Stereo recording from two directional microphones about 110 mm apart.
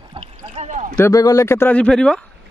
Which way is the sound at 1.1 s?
30° left (ahead or behind).